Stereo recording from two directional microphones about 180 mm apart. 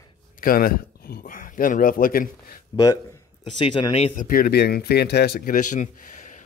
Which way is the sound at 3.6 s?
30° left (ahead or behind).